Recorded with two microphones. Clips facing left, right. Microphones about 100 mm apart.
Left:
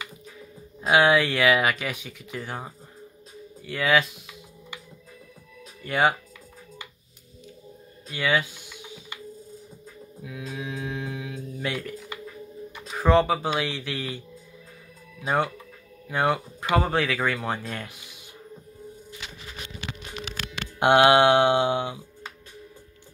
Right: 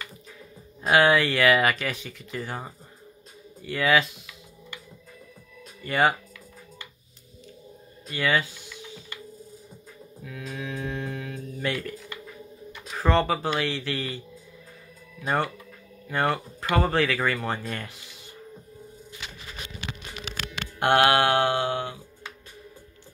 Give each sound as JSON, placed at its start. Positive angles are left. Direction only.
{"t": 0.8, "sound": "speech", "side_deg": 5}
{"t": 5.8, "sound": "speech", "side_deg": 0}
{"t": 8.1, "sound": "speech", "side_deg": 0}
{"t": 10.4, "sound": "music", "side_deg": 5}
{"t": 12.9, "sound": "speech", "side_deg": 5}
{"t": 15.2, "sound": "speech", "side_deg": 5}
{"t": 20.8, "sound": "mantra", "side_deg": 15}